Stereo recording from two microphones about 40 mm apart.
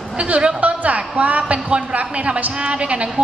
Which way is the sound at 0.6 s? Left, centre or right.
Right.